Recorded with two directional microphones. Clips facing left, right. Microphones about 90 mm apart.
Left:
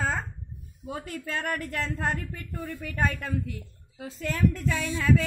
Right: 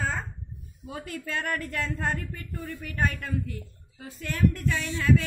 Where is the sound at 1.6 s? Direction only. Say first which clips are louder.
Even; 55° left (ahead or behind).